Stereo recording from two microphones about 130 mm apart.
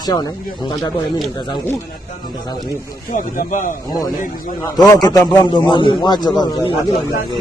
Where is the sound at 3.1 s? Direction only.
90° left.